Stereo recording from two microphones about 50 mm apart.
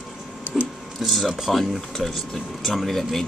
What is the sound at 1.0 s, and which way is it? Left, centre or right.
Speech, centre.